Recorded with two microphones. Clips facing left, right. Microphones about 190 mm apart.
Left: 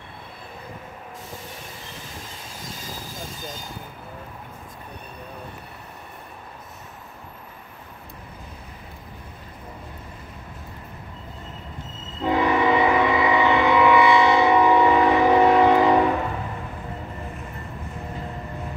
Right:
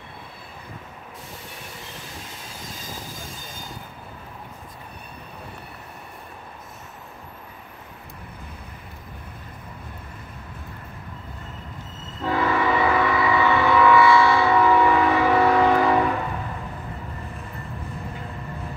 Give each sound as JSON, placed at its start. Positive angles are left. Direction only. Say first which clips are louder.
{"t": 12.2, "sound": "train", "louder": "left 2 dB", "side_deg": 20}